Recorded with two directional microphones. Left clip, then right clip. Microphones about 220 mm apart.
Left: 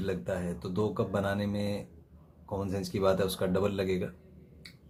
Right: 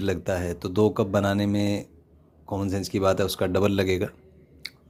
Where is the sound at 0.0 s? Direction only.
40° right (ahead or behind).